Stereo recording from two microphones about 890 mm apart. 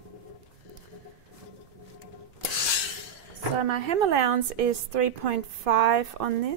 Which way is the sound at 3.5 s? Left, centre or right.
Right.